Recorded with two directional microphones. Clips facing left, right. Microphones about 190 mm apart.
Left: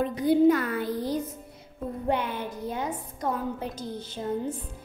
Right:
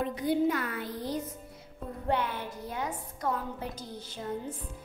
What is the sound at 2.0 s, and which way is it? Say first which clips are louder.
A woman's voice: left 2 dB; 15° left (ahead or behind).